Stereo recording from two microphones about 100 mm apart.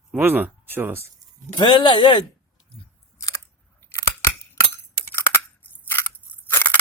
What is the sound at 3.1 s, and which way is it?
Scissors, 35° left (ahead or behind).